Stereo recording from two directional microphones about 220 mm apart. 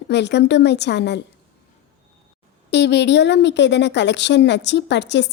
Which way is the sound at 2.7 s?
50° left (ahead or behind).